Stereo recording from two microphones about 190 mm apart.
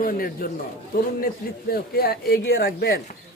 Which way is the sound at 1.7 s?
55° left (ahead or behind).